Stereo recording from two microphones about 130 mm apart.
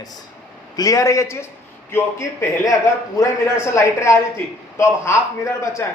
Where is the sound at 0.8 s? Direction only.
25° left (ahead or behind).